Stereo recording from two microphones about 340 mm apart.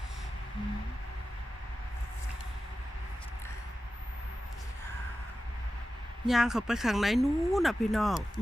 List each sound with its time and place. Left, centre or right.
6.2 s speech: centre